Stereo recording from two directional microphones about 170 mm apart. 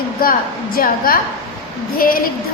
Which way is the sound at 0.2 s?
60° left (ahead or behind).